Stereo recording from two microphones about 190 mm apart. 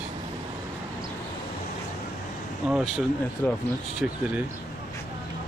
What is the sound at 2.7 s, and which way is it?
Speech, 5° right (ahead or behind).